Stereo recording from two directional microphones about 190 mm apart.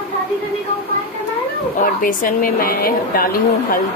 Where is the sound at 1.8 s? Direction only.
45° left (ahead or behind).